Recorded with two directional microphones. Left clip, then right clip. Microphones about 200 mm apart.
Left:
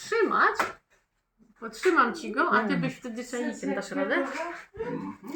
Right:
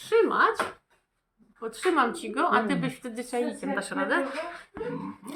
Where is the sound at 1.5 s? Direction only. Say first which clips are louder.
Left 2 dB; 15° right (ahead or behind).